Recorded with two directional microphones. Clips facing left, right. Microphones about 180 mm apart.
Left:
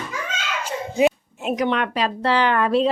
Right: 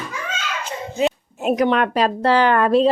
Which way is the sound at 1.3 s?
45° right (ahead or behind).